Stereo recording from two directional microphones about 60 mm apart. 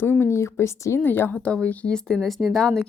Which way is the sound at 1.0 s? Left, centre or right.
Left.